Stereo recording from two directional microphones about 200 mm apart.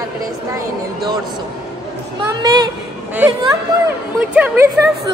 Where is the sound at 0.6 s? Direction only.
20° right (ahead or behind).